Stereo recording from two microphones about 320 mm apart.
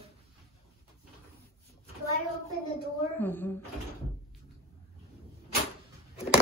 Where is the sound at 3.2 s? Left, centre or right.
Centre.